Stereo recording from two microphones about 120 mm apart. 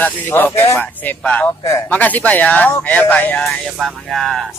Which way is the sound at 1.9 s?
15° left (ahead or behind).